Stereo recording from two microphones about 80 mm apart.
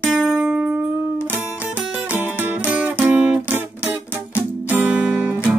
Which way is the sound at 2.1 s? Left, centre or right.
Centre.